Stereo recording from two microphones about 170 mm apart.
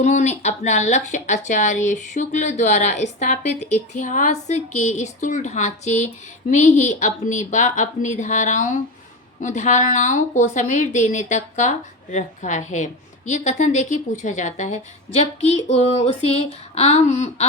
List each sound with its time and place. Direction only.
0.0 s speech: 45° left (ahead or behind)